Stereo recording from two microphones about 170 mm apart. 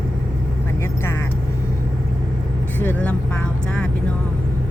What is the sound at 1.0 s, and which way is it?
Vehicle, 15° left (ahead or behind).